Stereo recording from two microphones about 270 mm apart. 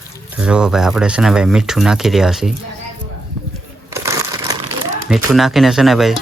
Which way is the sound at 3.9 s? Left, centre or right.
Centre.